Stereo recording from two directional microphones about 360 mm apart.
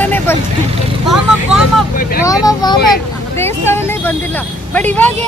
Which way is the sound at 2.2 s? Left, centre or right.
Centre.